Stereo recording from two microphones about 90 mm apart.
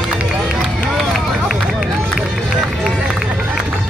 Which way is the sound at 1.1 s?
5° right (ahead or behind).